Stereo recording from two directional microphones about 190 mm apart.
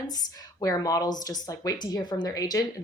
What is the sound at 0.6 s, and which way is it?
A woman's voice, 20° left (ahead or behind).